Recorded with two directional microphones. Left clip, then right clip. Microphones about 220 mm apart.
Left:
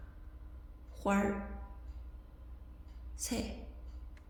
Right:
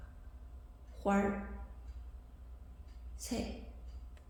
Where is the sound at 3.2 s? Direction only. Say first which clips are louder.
Left 2 dB; 15° left (ahead or behind).